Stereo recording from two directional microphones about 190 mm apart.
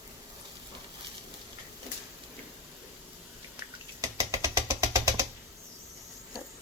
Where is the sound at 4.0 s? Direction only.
15° right (ahead or behind).